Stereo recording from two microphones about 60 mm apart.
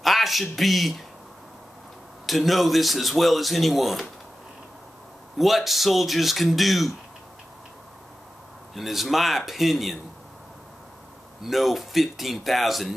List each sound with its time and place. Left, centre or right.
0.0 s speech: centre
2.2 s speech: centre
5.4 s speech: centre
8.7 s speech: centre
11.4 s speech: centre